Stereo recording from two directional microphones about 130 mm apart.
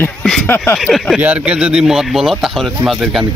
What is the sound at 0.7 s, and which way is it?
Speech, centre (ahead or behind).